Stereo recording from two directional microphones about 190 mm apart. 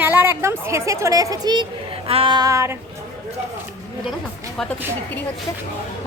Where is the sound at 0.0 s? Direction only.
10° right (ahead or behind).